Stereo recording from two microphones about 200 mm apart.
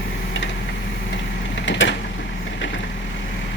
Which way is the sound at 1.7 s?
65° left (ahead or behind).